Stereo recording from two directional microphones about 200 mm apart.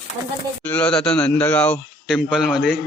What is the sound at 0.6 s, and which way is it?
A man's voice, 5° left (ahead or behind).